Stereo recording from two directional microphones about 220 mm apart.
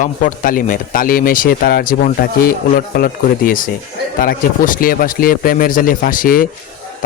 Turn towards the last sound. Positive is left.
turn(degrees=40)  # may be behind; listen again after turning